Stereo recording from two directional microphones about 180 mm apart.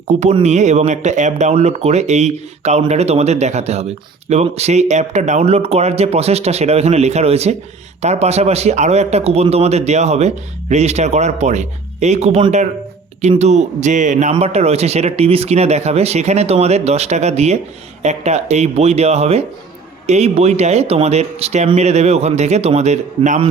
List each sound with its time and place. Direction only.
0.1 s speech: 40° right (ahead or behind)